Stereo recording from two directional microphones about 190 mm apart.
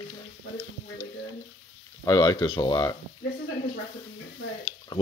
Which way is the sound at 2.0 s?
20° left (ahead or behind).